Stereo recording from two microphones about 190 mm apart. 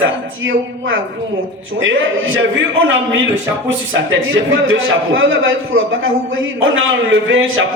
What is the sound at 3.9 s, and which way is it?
A man's voice, 90° right.